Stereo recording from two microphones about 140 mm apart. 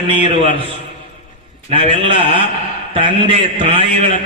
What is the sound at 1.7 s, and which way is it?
A man's voice, 40° right (ahead or behind).